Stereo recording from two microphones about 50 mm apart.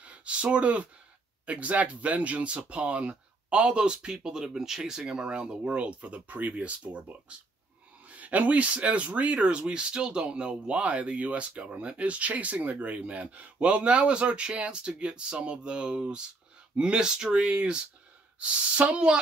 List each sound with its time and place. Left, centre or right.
0.0 s speech: right